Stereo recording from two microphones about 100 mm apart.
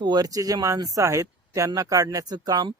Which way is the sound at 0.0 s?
45° right (ahead or behind).